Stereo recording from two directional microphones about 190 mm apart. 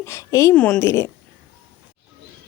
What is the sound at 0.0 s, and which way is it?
Speech, 15° left (ahead or behind).